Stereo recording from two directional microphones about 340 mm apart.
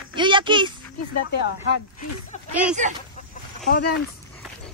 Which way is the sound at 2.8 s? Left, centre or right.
Right.